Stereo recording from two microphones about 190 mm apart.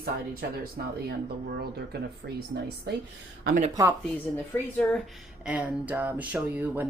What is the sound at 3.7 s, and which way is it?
Speech, 15° right (ahead or behind).